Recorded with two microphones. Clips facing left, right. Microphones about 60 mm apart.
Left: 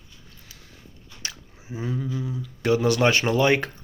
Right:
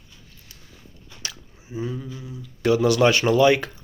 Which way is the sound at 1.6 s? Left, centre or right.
Left.